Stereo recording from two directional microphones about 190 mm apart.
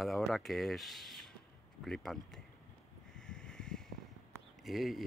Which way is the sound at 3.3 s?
5° left (ahead or behind).